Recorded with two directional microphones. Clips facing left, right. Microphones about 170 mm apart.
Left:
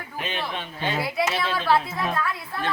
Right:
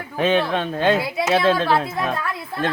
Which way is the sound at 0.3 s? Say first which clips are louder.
Right 13 dB; 80° right.